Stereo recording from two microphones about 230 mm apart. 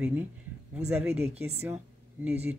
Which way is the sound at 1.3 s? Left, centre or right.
Right.